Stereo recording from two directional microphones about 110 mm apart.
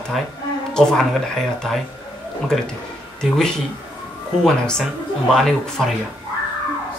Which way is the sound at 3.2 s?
5° left (ahead or behind).